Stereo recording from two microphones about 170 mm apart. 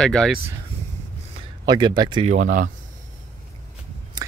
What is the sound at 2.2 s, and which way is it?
Speech, 45° right (ahead or behind).